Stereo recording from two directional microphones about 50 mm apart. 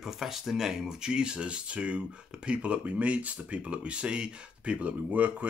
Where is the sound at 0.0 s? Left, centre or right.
Centre.